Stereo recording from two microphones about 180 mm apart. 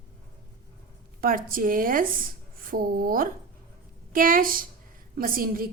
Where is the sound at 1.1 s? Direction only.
50° right (ahead or behind).